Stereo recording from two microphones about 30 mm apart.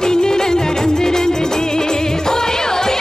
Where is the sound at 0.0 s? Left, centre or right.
Left.